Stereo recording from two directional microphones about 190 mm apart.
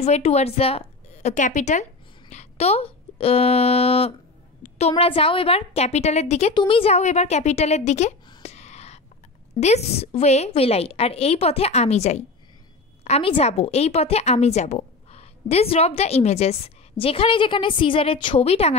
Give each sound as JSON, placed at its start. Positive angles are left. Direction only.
{"t": 0.0, "sound": "a woman's voice", "side_deg": 35}
{"t": 8.3, "sound": "a sound", "side_deg": 35}
{"t": 9.6, "sound": "a woman's voice", "side_deg": 35}